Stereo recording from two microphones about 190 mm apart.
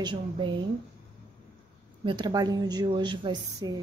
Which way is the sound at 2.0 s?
25° right (ahead or behind).